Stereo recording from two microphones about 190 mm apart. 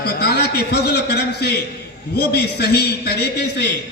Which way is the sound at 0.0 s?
55° left (ahead or behind).